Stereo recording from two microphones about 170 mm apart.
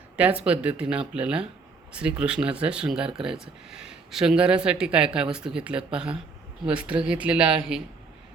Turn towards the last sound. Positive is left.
turn(degrees=-5)  # may be behind; listen again after turning